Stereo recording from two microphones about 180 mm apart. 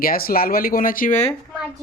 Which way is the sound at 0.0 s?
55° left (ahead or behind).